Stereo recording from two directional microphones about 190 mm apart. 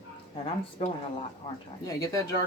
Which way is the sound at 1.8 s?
20° left (ahead or behind).